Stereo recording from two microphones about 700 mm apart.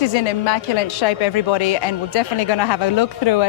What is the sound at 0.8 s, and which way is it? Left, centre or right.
Speech, left.